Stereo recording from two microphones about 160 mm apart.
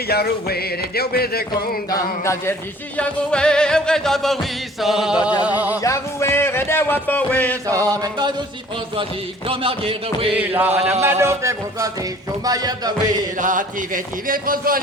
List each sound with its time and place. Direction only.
0.1 s speech: 75° left (ahead or behind)
1.9 s music: 20° left (ahead or behind)
3.0 s music: 5° left (ahead or behind)
5.4 s speech: 10° right (ahead or behind)
5.8 s music: 20° left (ahead or behind)
7.7 s chant: 20° right (ahead or behind)
9.5 s a sound: 35° right (ahead or behind)
10.3 s speech: 10° right (ahead or behind)
12.5 s chant: 25° right (ahead or behind)
13.4 s speech: 55° right (ahead or behind)